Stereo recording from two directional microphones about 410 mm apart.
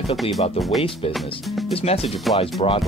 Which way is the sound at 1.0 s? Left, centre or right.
Centre.